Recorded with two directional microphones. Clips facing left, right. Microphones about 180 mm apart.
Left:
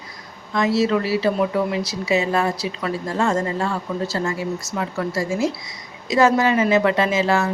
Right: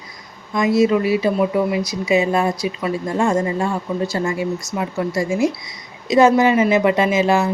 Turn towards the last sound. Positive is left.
turn(degrees=-15)  # may be behind; listen again after turning